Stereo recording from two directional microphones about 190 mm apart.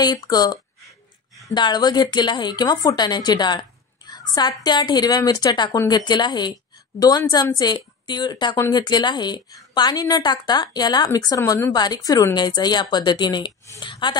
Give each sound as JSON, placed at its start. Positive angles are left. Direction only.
{"t": 0.0, "sound": "a woman's voice", "side_deg": 20}